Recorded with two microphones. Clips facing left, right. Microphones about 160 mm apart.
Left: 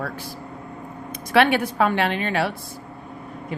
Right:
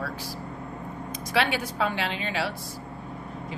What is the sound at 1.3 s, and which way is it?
Speech, 60° left (ahead or behind).